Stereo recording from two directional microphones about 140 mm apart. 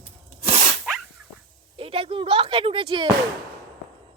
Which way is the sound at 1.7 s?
40° right (ahead or behind).